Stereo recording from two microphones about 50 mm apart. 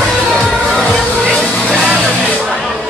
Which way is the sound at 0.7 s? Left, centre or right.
Centre.